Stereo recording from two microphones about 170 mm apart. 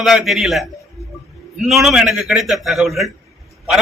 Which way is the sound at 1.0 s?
40° right (ahead or behind).